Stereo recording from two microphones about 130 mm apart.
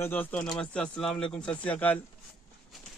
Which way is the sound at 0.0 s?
10° left (ahead or behind).